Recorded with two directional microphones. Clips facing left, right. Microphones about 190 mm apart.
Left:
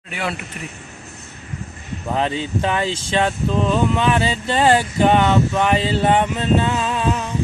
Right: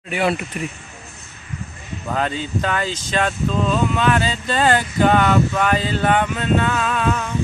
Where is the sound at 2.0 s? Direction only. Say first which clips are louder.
Left 2 dB; 25° left (ahead or behind).